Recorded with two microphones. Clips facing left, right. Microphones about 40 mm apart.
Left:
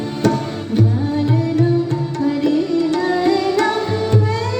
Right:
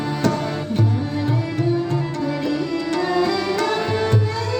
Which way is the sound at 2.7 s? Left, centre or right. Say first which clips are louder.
Left 3 dB; right.